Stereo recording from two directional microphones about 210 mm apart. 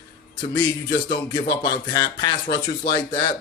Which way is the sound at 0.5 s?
20° left (ahead or behind).